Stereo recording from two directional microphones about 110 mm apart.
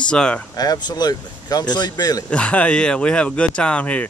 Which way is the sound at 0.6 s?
40° left (ahead or behind).